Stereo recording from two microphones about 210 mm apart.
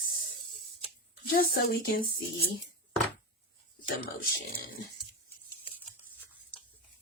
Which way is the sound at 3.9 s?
45° left (ahead or behind).